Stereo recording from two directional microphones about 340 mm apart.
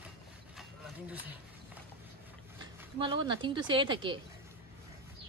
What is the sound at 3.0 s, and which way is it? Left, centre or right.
Speech, centre.